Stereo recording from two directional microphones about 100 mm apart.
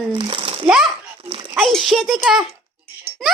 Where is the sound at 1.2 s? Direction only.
65° right (ahead or behind).